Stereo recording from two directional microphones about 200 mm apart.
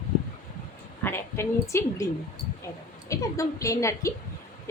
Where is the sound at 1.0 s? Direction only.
10° left (ahead or behind).